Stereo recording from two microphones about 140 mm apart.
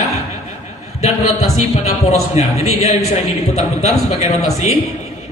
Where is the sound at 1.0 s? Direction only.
50° left (ahead or behind).